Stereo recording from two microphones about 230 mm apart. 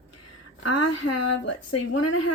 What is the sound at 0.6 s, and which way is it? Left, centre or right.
Speech, left.